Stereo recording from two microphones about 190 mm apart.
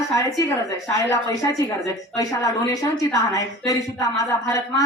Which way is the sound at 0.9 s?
15° left (ahead or behind).